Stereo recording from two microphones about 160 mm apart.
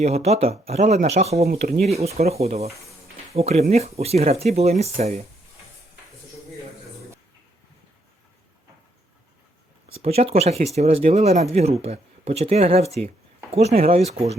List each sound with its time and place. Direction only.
0.0 s speech: 40° right (ahead or behind)
1.5 s speech: 65° right (ahead or behind)
1.8 s speech: 40° right (ahead or behind)
9.9 s speech: 40° right (ahead or behind)